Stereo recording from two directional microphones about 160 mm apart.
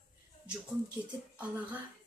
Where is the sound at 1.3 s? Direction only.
10° right (ahead or behind).